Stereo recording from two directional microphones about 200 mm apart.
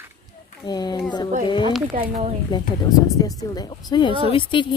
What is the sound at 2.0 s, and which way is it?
Speech, 30° right (ahead or behind).